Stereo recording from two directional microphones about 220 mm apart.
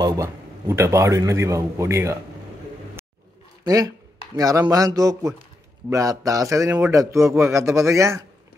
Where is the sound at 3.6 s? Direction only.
15° right (ahead or behind).